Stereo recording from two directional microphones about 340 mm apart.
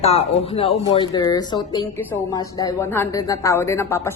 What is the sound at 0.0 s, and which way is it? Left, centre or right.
Speech, centre.